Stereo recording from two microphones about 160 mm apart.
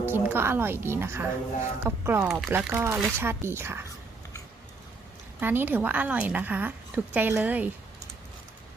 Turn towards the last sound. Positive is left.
turn(degrees=-10)  # may be behind; listen again after turning